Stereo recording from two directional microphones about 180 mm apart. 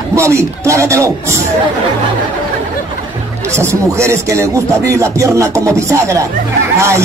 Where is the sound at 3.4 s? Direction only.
15° right (ahead or behind).